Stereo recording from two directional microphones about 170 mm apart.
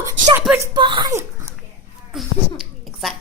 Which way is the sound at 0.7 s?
25° right (ahead or behind).